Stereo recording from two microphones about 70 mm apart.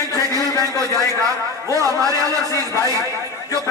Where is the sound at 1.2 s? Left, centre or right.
Right.